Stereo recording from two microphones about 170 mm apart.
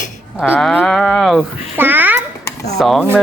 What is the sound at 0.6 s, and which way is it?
Speech, 5° left (ahead or behind).